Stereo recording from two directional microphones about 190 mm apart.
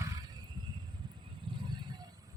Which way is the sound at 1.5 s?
25° right (ahead or behind).